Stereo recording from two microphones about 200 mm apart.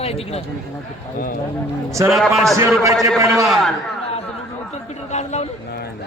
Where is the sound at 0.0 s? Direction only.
30° left (ahead or behind).